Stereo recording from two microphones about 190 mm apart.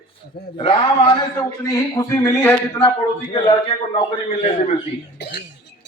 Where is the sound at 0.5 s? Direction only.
25° left (ahead or behind).